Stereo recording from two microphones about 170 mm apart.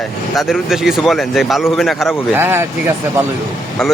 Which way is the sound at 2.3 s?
15° right (ahead or behind).